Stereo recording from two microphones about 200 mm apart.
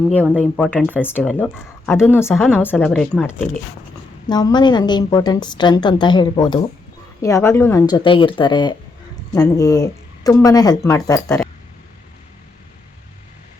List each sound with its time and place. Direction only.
0.1 s speech: 5° left (ahead or behind)
4.3 s a woman's voice: 20° left (ahead or behind)